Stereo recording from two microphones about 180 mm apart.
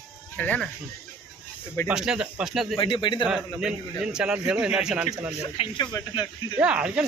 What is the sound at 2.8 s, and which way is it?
Speech, 25° left (ahead or behind).